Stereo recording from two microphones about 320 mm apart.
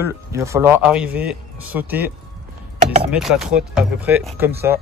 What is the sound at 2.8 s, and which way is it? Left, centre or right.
Chopping, right.